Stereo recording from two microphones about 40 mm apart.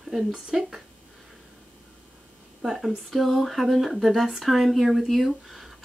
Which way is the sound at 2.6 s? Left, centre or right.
Centre.